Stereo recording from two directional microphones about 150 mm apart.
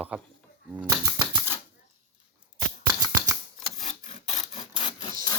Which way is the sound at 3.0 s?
25° right (ahead or behind).